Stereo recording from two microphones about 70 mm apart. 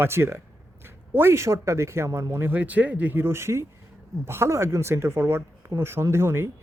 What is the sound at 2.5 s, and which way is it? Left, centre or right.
Speech, right.